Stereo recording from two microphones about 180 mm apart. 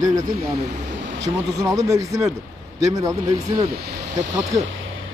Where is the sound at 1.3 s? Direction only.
20° right (ahead or behind).